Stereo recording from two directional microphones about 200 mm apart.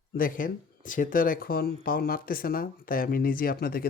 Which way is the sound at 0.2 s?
45° left (ahead or behind).